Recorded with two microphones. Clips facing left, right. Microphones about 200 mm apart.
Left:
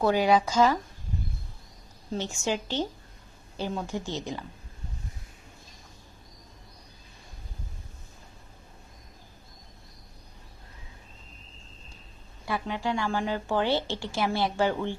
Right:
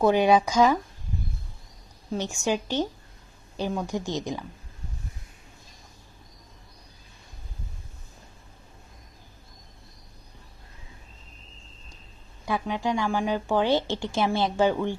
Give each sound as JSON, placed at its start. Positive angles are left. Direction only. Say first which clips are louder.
{"t": 0.0, "sound": "speech", "louder": "right 3 dB", "side_deg": -20}
{"t": 2.1, "sound": "a woman's voice", "louder": "right 3 dB", "side_deg": -15}
{"t": 12.5, "sound": "a woman's voice", "louder": "right 3 dB", "side_deg": -15}